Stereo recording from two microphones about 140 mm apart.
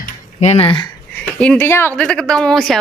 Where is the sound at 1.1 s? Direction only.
10° left (ahead or behind).